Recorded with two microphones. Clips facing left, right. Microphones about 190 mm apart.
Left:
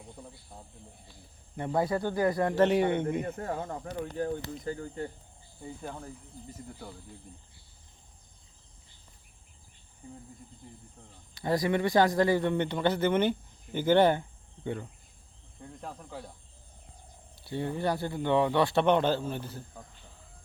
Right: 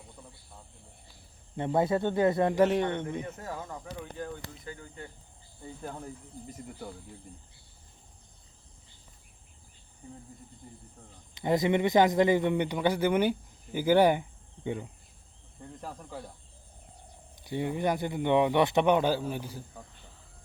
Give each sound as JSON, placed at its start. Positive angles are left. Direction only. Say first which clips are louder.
{"t": 1.5, "sound": "speech", "louder": "right 2 dB", "side_deg": -20}
{"t": 2.6, "sound": "speech", "louder": "left 2 dB", "side_deg": 5}
{"t": 3.2, "sound": "speech", "louder": "left 4 dB", "side_deg": 55}
{"t": 4.0, "sound": "speech", "louder": "left 6 dB", "side_deg": 45}
{"t": 5.6, "sound": "cricket", "louder": "even", "side_deg": 0}
{"t": 11.3, "sound": "speech", "louder": "right 2 dB", "side_deg": -20}
{"t": 15.6, "sound": "cricket", "louder": "right 1 dB", "side_deg": 0}
{"t": 17.4, "sound": "speech", "louder": "right 1 dB", "side_deg": -15}